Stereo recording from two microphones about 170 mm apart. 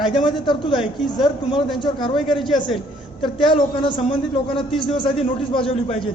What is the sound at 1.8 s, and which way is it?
Speech, 30° left (ahead or behind).